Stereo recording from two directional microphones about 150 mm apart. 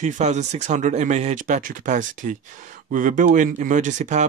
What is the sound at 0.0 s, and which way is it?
Speech, 50° right (ahead or behind).